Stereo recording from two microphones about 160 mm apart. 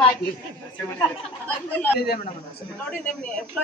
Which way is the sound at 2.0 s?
80° left.